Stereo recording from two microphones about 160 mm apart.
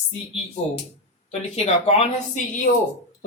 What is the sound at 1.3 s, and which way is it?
A woman's voice, 40° left (ahead or behind).